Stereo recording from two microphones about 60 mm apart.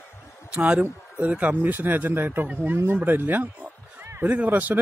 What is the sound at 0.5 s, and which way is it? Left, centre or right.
Speech, centre.